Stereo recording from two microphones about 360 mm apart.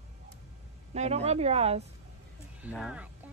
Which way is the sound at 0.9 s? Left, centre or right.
Centre.